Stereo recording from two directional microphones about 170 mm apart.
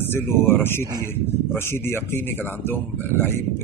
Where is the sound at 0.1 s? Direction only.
15° left (ahead or behind).